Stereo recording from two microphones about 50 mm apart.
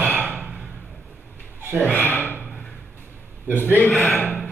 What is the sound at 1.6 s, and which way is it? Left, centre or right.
Speech, right.